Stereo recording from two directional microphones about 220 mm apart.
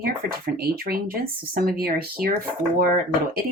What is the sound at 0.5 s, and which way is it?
Speech, 45° right (ahead or behind).